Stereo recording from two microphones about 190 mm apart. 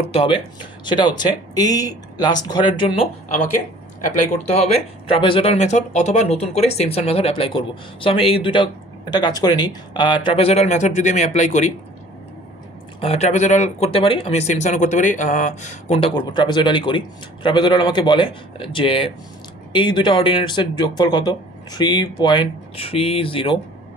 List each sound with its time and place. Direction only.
0.1 s speech: 30° left (ahead or behind)
4.1 s speech: 40° left (ahead or behind)
13.0 s speech: 35° left (ahead or behind)